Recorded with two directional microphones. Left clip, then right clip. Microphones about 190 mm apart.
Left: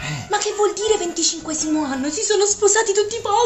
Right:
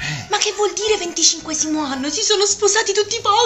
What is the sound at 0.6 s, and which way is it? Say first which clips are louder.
A woman's voice: even; 25° left (ahead or behind).